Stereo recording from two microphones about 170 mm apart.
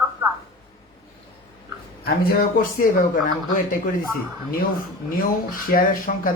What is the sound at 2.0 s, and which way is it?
Speech, 60° left (ahead or behind).